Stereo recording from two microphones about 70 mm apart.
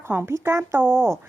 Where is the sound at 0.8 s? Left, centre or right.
Right.